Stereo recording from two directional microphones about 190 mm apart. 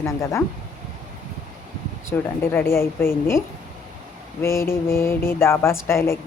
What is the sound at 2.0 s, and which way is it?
A woman's voice, 10° left (ahead or behind).